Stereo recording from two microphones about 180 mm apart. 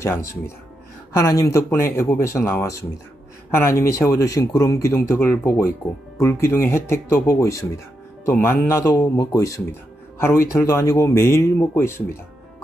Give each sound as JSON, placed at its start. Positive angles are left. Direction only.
{"t": 0.0, "sound": "speech", "side_deg": 15}